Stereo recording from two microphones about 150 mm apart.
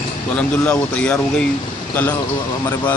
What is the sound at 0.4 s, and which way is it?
Speech, 10° left (ahead or behind).